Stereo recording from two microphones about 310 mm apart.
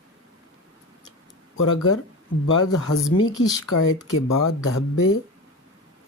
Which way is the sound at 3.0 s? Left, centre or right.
Left.